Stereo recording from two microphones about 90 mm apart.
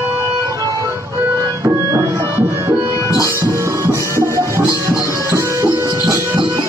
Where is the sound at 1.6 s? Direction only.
35° right (ahead or behind).